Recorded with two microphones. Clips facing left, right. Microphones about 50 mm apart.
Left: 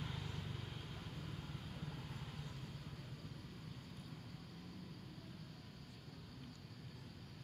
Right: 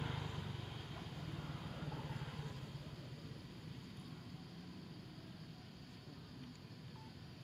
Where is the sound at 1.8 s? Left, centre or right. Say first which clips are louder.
Right 3 dB; right.